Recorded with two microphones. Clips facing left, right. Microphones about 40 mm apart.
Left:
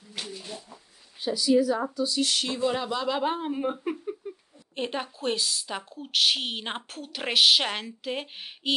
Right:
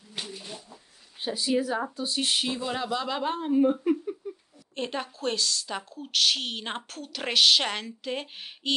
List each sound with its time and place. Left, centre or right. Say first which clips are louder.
0.3 s a sound: left 1 dB; centre
1.2 s a woman's voice: left 4 dB; right
2.4 s speech: left 3 dB; centre
3.3 s a woman's voice: right 4 dB; centre